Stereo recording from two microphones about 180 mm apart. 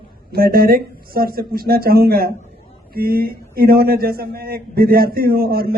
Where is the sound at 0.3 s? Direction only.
55° right (ahead or behind).